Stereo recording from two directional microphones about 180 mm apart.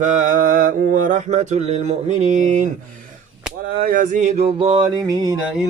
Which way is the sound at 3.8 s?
50° right (ahead or behind).